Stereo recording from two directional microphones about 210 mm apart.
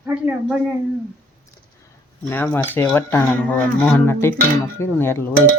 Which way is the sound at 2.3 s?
10° left (ahead or behind).